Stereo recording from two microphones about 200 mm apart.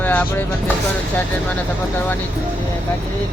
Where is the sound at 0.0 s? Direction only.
10° left (ahead or behind).